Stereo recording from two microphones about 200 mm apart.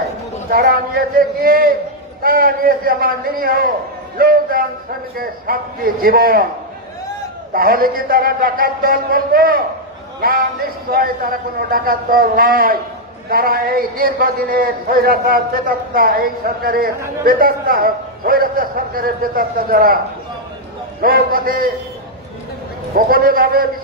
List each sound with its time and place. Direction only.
0.5 s a man's voice: 45° right (ahead or behind)
7.5 s a man's voice: 45° right (ahead or behind)
21.0 s a man's voice: 45° right (ahead or behind)
23.0 s a man's voice: 45° right (ahead or behind)